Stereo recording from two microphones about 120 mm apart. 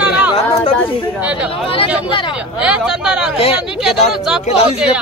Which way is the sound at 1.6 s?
50° left (ahead or behind).